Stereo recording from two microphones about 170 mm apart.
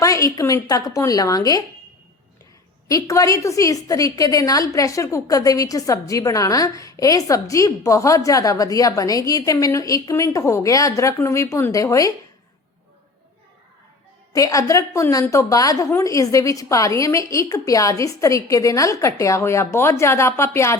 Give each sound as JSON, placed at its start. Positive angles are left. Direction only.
{"t": 0.0, "sound": "a woman's voice", "side_deg": 20}
{"t": 2.9, "sound": "a woman's voice", "side_deg": 20}
{"t": 14.3, "sound": "a woman's voice", "side_deg": 20}